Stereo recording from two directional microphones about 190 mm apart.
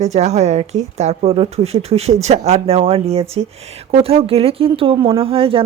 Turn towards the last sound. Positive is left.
turn(degrees=-30)  # may be behind; listen again after turning